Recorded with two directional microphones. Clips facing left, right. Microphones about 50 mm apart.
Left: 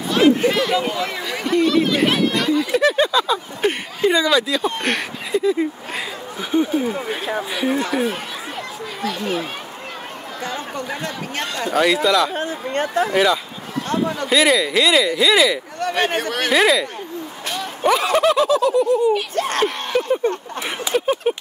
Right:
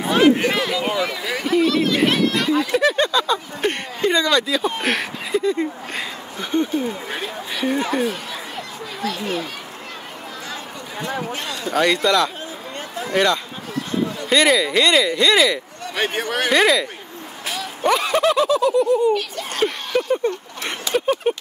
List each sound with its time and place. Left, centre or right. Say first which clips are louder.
0.5 s a sound: left 2 dB; centre
1.2 s speech: left 1 dB; centre
9.0 s speech: left 1 dB; centre
11.7 s speech: left 1 dB; centre
12.4 s speech: left 9 dB; left
13.1 s speech: left 1 dB; centre
19.3 s a child's voice: left 7 dB; left
19.9 s speech: left 1 dB; centre